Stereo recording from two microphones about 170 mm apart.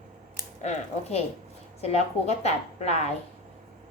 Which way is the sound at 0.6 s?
40° left (ahead or behind).